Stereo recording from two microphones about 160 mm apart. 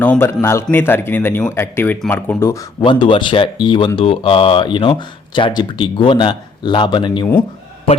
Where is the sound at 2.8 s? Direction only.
30° left (ahead or behind).